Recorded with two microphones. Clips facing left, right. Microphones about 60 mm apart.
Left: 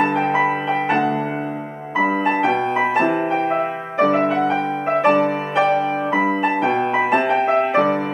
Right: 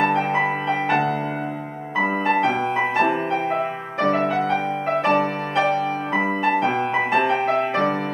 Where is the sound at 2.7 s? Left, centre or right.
Centre.